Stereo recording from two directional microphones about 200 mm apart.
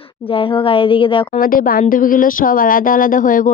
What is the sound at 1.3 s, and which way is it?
Speech, 45° left (ahead or behind).